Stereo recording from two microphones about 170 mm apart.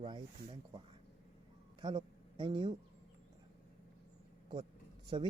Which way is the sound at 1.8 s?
30° right (ahead or behind).